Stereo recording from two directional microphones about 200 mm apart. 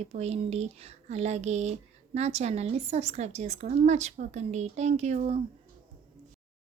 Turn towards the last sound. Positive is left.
turn(degrees=-30)  # may be behind; listen again after turning